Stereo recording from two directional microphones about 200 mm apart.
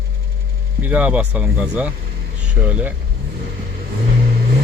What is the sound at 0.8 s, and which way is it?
Speech, 10° right (ahead or behind).